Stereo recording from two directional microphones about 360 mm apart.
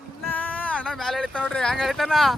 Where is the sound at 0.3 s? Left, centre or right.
Centre.